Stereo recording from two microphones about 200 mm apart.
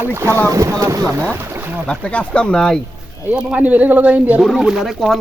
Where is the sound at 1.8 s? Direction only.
5° left (ahead or behind).